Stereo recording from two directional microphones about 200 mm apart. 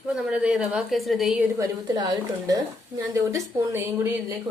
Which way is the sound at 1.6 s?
20° right (ahead or behind).